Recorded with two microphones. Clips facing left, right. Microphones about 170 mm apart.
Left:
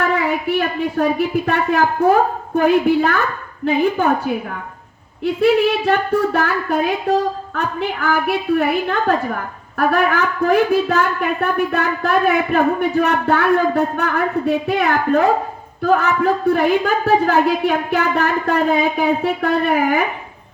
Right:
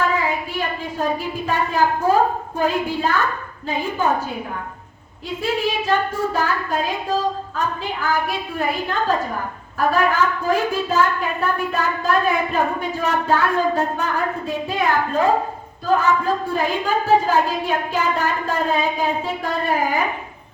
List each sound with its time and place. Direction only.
0.0 s a sound: 65° left (ahead or behind)
1.5 s a woman's voice: 65° left (ahead or behind)
5.2 s a woman's voice: 65° left (ahead or behind)